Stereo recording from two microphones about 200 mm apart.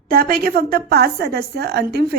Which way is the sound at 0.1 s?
45° right (ahead or behind).